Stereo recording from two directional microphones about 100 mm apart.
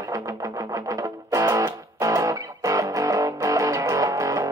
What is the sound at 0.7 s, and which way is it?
Music, 35° right (ahead or behind).